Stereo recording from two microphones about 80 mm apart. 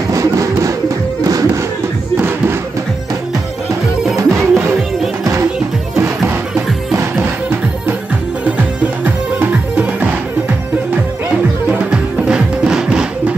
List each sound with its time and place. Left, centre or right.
0.1 s music: right
4.2 s music: right
5.9 s music: right
9.0 s music: right
11.7 s music: centre